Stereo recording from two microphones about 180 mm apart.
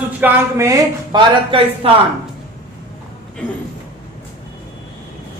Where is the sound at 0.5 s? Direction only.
20° right (ahead or behind).